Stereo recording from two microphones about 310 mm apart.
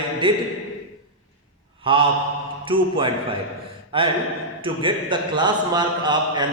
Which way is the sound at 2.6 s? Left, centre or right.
Centre.